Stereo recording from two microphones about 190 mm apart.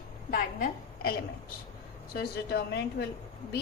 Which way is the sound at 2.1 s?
55° left (ahead or behind).